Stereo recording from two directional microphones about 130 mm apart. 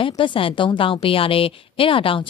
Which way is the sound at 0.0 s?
40° left (ahead or behind).